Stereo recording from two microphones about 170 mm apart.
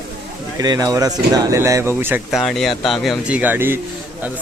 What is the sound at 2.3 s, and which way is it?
Speech, centre (ahead or behind).